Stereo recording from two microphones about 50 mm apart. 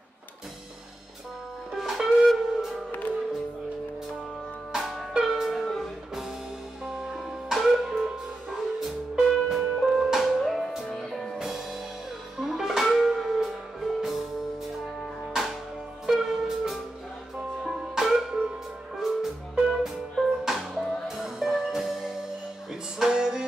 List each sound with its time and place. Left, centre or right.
1.7 s music: centre
2.9 s music: left
4.7 s music: centre
6.8 s music: centre
11.3 s music: centre
16.1 s music: centre